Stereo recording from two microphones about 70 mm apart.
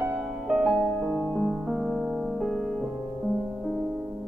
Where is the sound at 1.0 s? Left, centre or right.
Centre.